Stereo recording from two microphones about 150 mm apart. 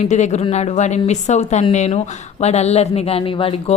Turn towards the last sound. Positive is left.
turn(degrees=40)  # may be behind; listen again after turning